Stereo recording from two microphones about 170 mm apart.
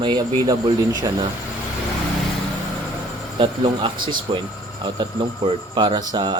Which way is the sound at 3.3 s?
30° right (ahead or behind).